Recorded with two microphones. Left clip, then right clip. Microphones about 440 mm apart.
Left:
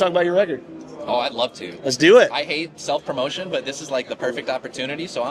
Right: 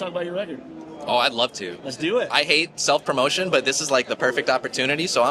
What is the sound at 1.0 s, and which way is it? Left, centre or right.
Speech, right.